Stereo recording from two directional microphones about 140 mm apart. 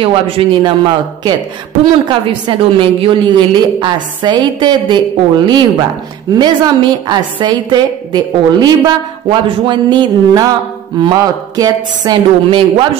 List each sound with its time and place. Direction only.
0.0 s a woman's voice: 40° right (ahead or behind)